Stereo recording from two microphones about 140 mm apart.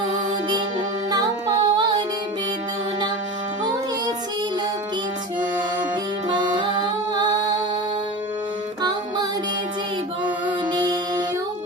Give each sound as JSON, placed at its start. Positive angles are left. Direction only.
{"t": 1.1, "sound": "music", "side_deg": -25}
{"t": 6.2, "sound": "music", "side_deg": -35}
{"t": 10.7, "sound": "music", "side_deg": -30}